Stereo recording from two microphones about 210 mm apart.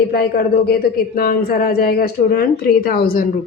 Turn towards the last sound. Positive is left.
turn(degrees=45)  # may be behind; listen again after turning